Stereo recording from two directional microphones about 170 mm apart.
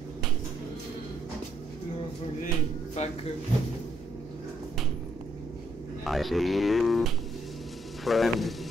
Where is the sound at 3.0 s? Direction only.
40° left (ahead or behind).